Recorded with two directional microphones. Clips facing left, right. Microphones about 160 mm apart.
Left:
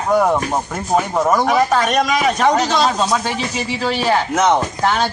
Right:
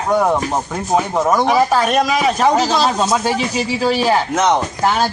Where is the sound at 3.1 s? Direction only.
15° right (ahead or behind).